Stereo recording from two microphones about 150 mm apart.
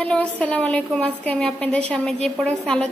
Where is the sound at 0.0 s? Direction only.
5° left (ahead or behind).